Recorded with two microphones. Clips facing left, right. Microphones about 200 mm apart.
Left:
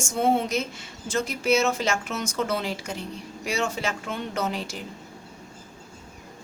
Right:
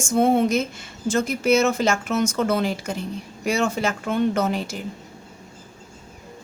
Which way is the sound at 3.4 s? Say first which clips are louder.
Right 5 dB; 50° right (ahead or behind).